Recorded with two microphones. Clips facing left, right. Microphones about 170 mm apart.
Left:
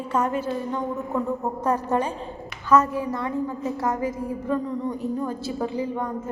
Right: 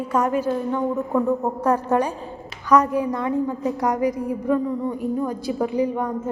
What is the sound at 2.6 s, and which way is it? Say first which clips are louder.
A woman's voice: right 2 dB; 15° right (ahead or behind).